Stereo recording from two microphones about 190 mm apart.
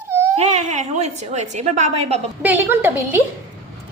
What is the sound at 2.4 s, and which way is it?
Speech, 10° right (ahead or behind).